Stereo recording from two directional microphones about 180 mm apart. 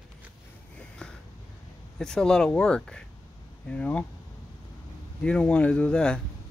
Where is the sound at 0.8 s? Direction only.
5° left (ahead or behind).